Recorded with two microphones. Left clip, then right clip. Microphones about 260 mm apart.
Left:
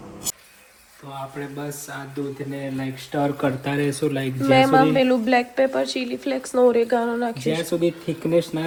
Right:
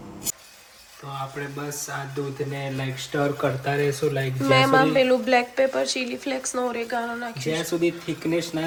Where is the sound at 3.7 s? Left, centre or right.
Left.